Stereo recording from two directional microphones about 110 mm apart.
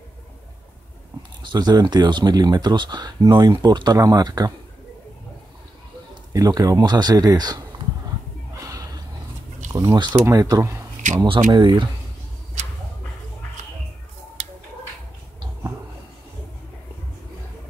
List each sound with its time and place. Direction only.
1.4 s speech: 40° right (ahead or behind)
6.3 s speech: 35° right (ahead or behind)
8.5 s gasp: 30° right (ahead or behind)
9.7 s speech: 35° right (ahead or behind)
11.2 s speech: 45° right (ahead or behind)